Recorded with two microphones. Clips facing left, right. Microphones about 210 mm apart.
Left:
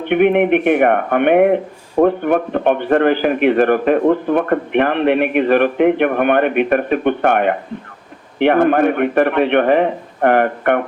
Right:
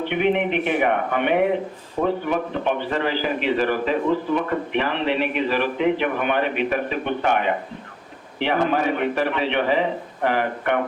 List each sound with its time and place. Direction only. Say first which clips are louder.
0.0 s a man's voice: left 8 dB; 55° left (ahead or behind)